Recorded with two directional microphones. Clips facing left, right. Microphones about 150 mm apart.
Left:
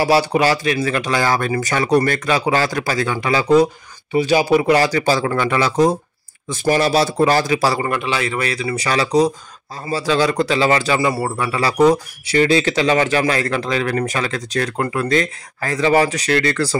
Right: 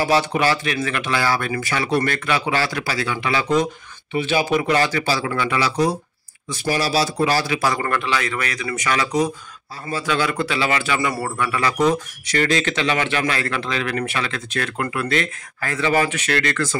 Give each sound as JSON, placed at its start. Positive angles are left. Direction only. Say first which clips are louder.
{"t": 0.0, "sound": "a man's voice", "louder": "left 3 dB", "side_deg": 35}
{"t": 7.5, "sound": "a man's voice", "louder": "left 4 dB", "side_deg": 35}
{"t": 7.8, "sound": "a man's voice", "louder": "left 2 dB", "side_deg": 20}